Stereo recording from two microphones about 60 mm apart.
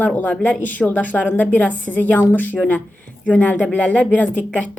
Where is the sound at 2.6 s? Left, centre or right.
Centre.